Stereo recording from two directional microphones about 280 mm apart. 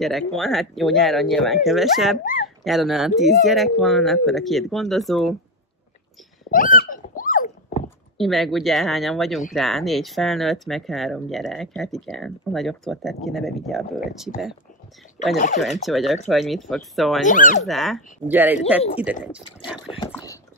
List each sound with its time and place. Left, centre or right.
0.0 s speech: centre
6.5 s hiccup: left
8.2 s speech: centre
15.3 s speech: left
15.6 s speech: centre
17.3 s speech: left
17.6 s speech: centre
19.9 s speech: centre